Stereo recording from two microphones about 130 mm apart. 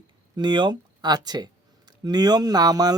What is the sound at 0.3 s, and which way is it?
Speech, 35° right (ahead or behind).